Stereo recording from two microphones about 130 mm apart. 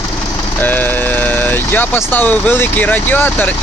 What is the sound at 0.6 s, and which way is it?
Speech, 15° left (ahead or behind).